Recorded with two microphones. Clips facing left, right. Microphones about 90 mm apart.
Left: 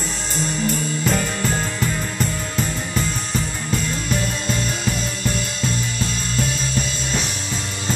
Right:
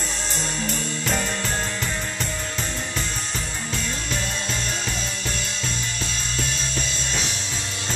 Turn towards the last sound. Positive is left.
turn(degrees=5)  # may be behind; listen again after turning